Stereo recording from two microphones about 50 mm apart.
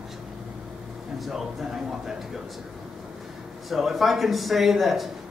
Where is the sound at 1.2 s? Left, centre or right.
Centre.